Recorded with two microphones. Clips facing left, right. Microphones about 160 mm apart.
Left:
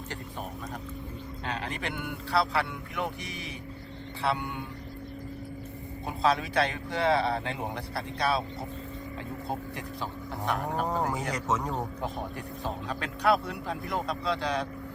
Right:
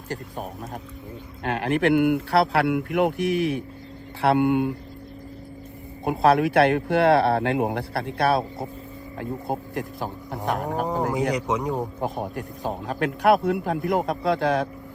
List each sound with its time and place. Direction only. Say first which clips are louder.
1.5 s speech: right 14 dB; 65° right (ahead or behind)
6.1 s speech: right 8 dB; 60° right (ahead or behind)
11.3 s speech: right 6 dB; 15° right (ahead or behind)
11.9 s speech: right 6 dB; 45° right (ahead or behind)